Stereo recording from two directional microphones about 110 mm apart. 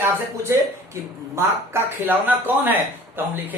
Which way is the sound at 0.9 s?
25° right (ahead or behind).